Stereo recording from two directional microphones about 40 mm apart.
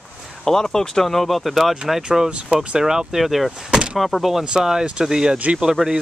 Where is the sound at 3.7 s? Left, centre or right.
Right.